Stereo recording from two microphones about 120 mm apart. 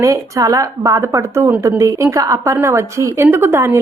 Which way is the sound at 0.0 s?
30° right (ahead or behind).